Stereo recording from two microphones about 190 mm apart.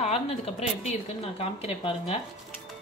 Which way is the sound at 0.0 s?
35° left (ahead or behind).